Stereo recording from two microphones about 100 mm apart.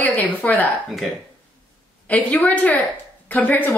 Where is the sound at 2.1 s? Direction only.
15° left (ahead or behind).